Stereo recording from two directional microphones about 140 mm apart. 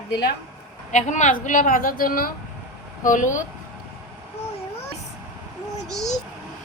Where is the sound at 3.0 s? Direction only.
65° left (ahead or behind).